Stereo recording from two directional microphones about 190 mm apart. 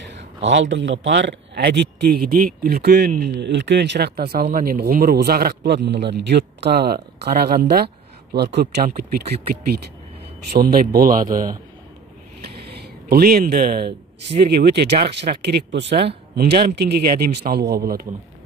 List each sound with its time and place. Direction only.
0.1 s a man's voice: 70° right (ahead or behind)
10.5 s a man's voice: 50° right (ahead or behind)
12.7 s a man's voice: 55° right (ahead or behind)